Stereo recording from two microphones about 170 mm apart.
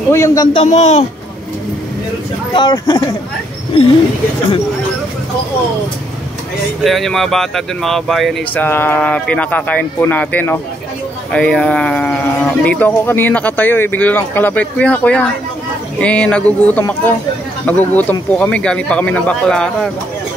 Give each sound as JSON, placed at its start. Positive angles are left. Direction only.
{"t": 0.1, "sound": "speech", "side_deg": 20}
{"t": 0.5, "sound": "speech", "side_deg": 35}
{"t": 2.5, "sound": "speech", "side_deg": 25}
{"t": 6.8, "sound": "speech", "side_deg": 0}
{"t": 8.6, "sound": "speech", "side_deg": 10}